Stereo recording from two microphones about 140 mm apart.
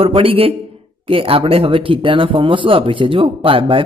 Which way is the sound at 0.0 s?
40° right (ahead or behind).